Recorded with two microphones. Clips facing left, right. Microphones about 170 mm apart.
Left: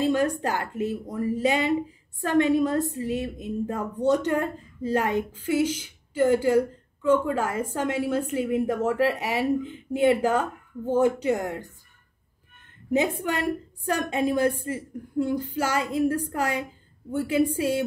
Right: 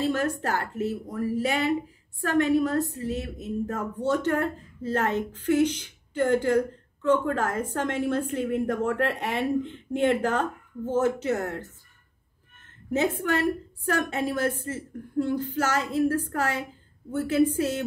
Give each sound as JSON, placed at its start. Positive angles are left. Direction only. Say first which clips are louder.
{"t": 0.0, "sound": "a woman's voice", "louder": "left 3 dB", "side_deg": 15}
{"t": 12.9, "sound": "speech", "louder": "even", "side_deg": 15}